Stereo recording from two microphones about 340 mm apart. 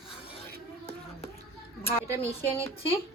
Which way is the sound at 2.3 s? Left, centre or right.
Centre.